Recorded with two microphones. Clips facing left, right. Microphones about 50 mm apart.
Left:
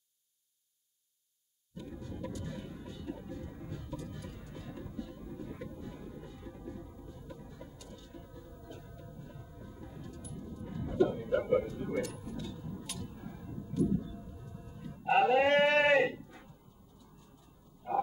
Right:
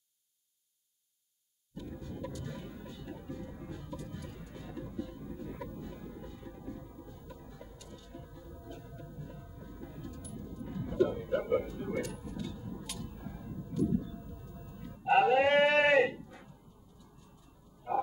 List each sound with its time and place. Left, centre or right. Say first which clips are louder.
1.9 s music: even; centre
13.0 s a sound: right 1 dB; centre
13.9 s music: right 2 dB; centre